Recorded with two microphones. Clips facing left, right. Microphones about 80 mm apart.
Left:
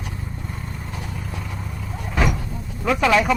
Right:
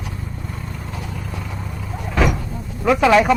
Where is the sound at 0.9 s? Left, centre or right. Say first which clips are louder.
Right 2 dB; right.